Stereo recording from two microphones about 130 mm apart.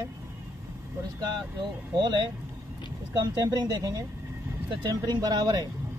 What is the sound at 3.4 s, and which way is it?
Speech, 30° right (ahead or behind).